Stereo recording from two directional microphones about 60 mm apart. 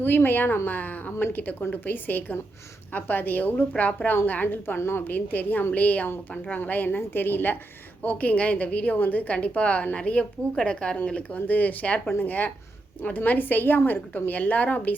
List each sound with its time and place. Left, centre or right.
0.0 s a woman's voice: left
5.0 s a woman's voice: left
11.3 s a woman's voice: left